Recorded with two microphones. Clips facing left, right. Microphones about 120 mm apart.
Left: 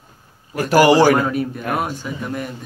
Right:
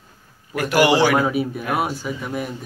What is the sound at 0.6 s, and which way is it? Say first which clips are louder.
Speech: left 4 dB; 40° left (ahead or behind).